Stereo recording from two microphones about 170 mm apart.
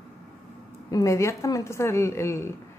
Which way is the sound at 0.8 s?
20° left (ahead or behind).